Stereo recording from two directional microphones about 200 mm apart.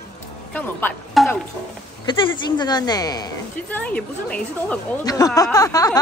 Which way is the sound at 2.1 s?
20° left (ahead or behind).